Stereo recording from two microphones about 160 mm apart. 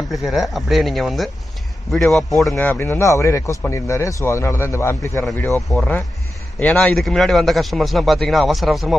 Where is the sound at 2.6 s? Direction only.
15° left (ahead or behind).